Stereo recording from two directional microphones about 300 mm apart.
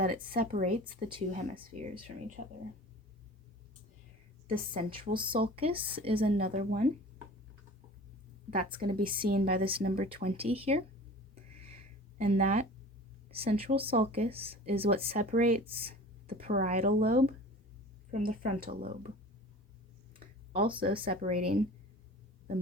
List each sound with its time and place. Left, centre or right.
0.0 s speech: right
4.4 s a woman's voice: centre
8.4 s speech: right
9.6 s speech: centre
11.6 s a sound: centre
13.3 s speech: centre
20.9 s speech: centre